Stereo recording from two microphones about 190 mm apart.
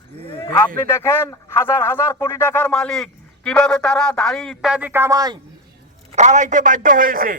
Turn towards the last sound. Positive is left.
turn(degrees=-45)  # may be behind; listen again after turning